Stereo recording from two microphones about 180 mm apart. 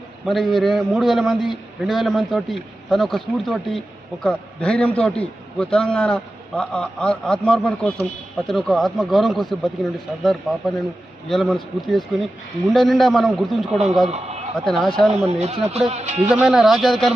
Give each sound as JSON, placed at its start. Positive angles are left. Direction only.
{"t": 0.3, "sound": "a man's voice", "side_deg": 0}
{"t": 14.1, "sound": "a man's voice", "side_deg": -35}
{"t": 14.6, "sound": "a man's voice", "side_deg": 0}
{"t": 15.3, "sound": "speech", "side_deg": -35}
{"t": 16.3, "sound": "a man's voice", "side_deg": -5}